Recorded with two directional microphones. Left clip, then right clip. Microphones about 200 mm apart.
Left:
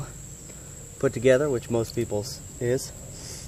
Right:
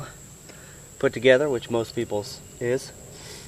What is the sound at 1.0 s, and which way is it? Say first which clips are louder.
Speech: right 2 dB; 20° right (ahead or behind).